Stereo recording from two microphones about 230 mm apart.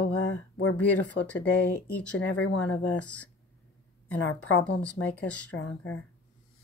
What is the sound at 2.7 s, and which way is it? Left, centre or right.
Speech, centre.